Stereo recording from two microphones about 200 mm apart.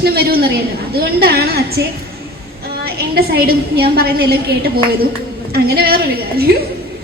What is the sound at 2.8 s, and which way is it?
A woman's voice, 50° right (ahead or behind).